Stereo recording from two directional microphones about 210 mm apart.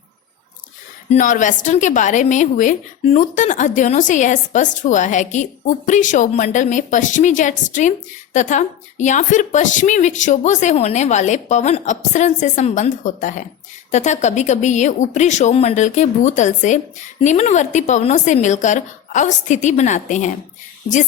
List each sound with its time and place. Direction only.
1.1 s a woman's voice: 35° left (ahead or behind)